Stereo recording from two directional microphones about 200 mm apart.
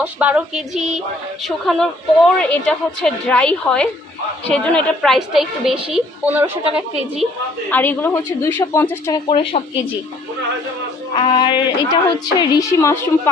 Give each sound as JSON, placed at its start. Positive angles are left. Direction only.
{"t": 0.0, "sound": "a woman's voice", "side_deg": -5}
{"t": 7.7, "sound": "speech", "side_deg": 10}
{"t": 9.3, "sound": "speech", "side_deg": 25}
{"t": 11.1, "sound": "speech", "side_deg": 25}